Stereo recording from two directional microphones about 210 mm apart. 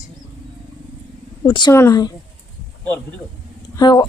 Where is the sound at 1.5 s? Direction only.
20° left (ahead or behind).